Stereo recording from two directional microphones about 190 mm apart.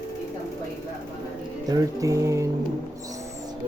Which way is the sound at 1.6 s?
20° right (ahead or behind).